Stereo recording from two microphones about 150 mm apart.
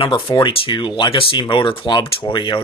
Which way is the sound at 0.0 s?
35° left (ahead or behind).